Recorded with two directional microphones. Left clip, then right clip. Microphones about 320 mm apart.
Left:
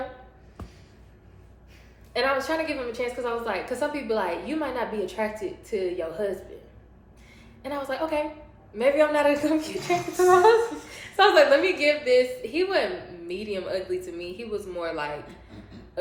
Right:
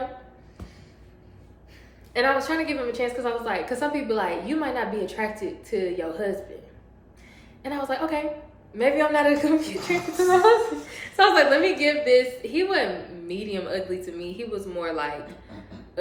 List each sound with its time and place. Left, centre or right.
2.1 s a woman's voice: centre
7.6 s a woman's voice: centre